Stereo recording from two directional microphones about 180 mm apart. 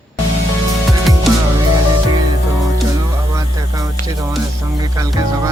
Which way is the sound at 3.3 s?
20° right (ahead or behind).